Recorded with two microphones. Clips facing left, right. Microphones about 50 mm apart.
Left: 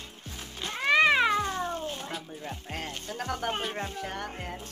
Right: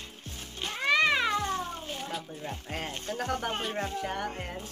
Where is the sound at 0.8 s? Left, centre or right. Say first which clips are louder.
Left 3 dB; centre.